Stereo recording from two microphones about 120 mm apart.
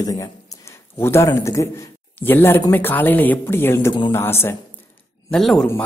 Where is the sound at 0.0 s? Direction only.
30° left (ahead or behind).